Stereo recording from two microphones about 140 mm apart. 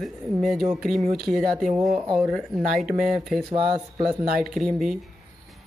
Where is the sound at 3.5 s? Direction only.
35° right (ahead or behind).